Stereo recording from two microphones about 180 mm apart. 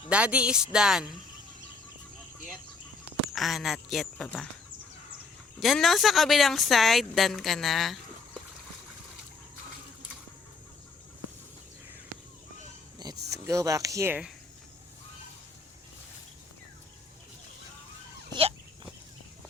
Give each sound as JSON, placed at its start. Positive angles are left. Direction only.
{"t": 0.1, "sound": "speech", "side_deg": -5}
{"t": 3.3, "sound": "speech", "side_deg": 0}
{"t": 5.5, "sound": "speech", "side_deg": 0}
{"t": 13.0, "sound": "speech", "side_deg": -20}
{"t": 18.3, "sound": "dog", "side_deg": -30}